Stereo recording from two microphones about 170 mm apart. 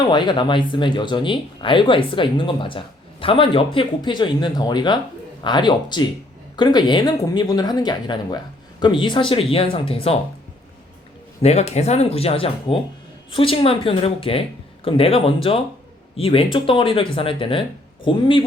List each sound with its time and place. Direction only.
0.1 s speech: 30° left (ahead or behind)
11.4 s speech: 40° left (ahead or behind)